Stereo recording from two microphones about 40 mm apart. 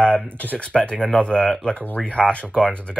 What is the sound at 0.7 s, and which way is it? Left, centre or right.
Speech, left.